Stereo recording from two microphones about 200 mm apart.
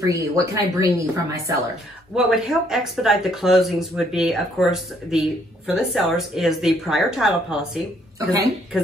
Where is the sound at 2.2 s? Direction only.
Centre (ahead or behind).